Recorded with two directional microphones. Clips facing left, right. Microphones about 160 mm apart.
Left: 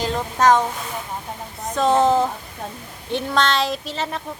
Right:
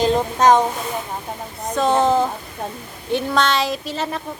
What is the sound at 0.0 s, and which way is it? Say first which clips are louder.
Speech: right 3 dB; 20° right (ahead or behind).